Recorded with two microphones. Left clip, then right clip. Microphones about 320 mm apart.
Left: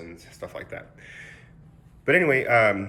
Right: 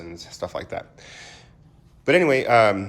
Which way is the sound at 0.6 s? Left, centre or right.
Centre.